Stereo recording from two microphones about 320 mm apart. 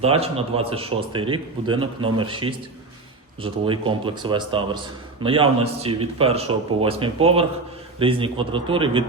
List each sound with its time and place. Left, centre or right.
0.0 s speech: centre